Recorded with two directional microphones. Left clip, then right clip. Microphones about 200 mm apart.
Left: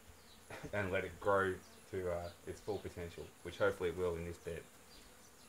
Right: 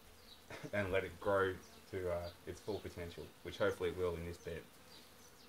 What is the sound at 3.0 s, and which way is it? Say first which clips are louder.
Speech: left 1 dB; 15° left (ahead or behind).